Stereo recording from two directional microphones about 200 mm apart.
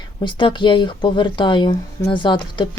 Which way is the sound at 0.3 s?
25° left (ahead or behind).